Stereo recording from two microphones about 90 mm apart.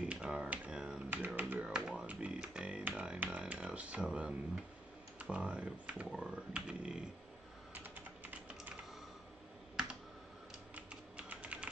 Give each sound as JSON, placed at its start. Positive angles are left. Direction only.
{"t": 0.1, "sound": "typewriter", "side_deg": -10}
{"t": 1.1, "sound": "finger snapping", "side_deg": -20}
{"t": 1.4, "sound": "music", "side_deg": -10}
{"t": 5.2, "sound": "speech", "side_deg": -15}
{"t": 7.7, "sound": "typing", "side_deg": -20}
{"t": 10.7, "sound": "typing", "side_deg": -15}